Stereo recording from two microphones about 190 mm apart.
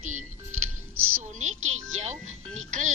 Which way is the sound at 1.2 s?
40° right (ahead or behind).